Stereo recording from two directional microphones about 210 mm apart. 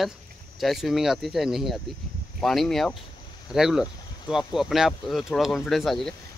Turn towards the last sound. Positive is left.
turn(degrees=0)  # may be behind; listen again after turning